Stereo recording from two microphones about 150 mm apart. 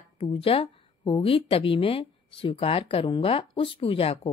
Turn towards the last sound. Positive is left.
turn(degrees=40)  # may be behind; listen again after turning